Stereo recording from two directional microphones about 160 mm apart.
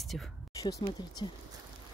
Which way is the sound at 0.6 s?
25° left (ahead or behind).